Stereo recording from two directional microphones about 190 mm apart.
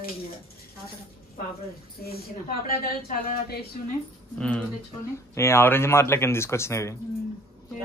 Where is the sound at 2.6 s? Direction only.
55° left (ahead or behind).